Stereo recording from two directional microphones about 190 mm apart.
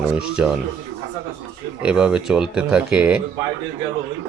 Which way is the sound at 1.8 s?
5° right (ahead or behind).